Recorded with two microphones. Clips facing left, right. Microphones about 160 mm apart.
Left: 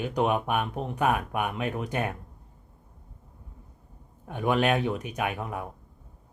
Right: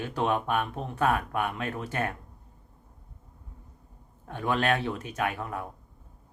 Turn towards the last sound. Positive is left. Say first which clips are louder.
# even
turn(degrees=15)  # may be behind; listen again after turning